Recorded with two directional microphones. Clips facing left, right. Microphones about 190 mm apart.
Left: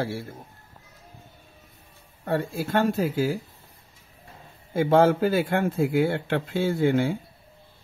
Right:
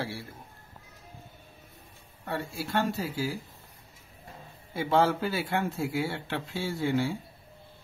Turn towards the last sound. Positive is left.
turn(degrees=55)  # may be behind; listen again after turning